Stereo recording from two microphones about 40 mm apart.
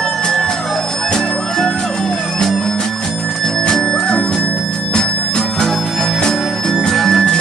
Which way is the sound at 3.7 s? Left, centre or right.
Centre.